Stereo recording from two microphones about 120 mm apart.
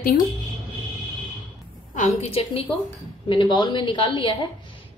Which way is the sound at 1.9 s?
70° left (ahead or behind).